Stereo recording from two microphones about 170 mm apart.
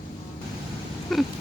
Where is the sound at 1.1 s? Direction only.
Centre (ahead or behind).